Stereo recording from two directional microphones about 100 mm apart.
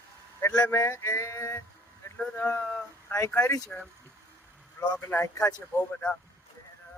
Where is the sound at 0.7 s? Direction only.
30° left (ahead or behind).